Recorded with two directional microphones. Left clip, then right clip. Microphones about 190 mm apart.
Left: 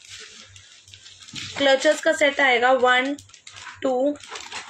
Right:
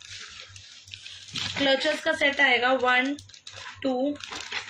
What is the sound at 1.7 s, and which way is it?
Speech, 15° left (ahead or behind).